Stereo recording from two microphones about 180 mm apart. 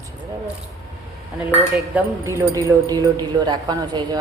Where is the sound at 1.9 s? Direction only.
15° right (ahead or behind).